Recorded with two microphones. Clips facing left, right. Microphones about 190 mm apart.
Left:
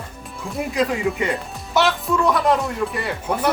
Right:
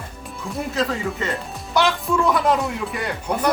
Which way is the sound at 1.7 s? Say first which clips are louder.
Left 1 dB; centre (ahead or behind).